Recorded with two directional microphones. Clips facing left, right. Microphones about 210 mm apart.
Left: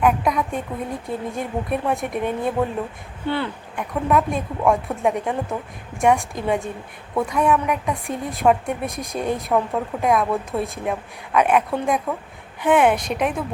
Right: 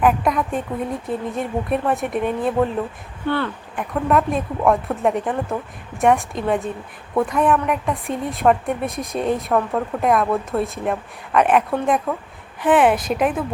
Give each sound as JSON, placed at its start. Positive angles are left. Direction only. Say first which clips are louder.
{"t": 0.0, "sound": "a woman's voice", "louder": "right 1 dB", "side_deg": 0}
{"t": 3.2, "sound": "speech", "louder": "right 2 dB", "side_deg": 15}
{"t": 3.8, "sound": "a woman's voice", "louder": "right 1 dB", "side_deg": 0}